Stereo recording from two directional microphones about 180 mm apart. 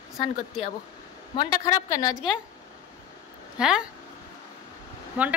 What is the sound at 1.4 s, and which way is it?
Speech, 20° left (ahead or behind).